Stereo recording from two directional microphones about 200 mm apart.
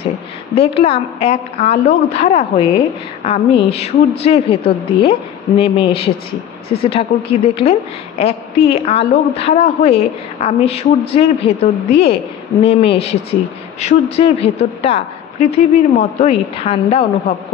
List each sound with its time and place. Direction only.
0.6 s a woman's voice: 30° left (ahead or behind)
6.7 s a woman's voice: 30° left (ahead or behind)